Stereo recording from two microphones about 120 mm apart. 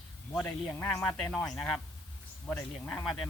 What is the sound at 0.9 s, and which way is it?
Speech, 5° left (ahead or behind).